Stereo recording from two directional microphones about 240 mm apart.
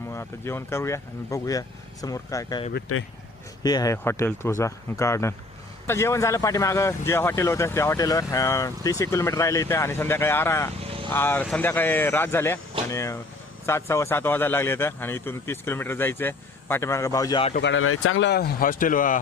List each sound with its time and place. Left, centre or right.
0.1 s speech: centre
2.9 s speech: left
3.6 s speech: centre
10.8 s vehicle: right
11.1 s speech: centre
17.5 s speech: left